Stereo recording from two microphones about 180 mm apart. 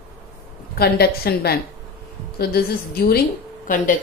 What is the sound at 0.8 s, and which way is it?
Speech, 60° left (ahead or behind).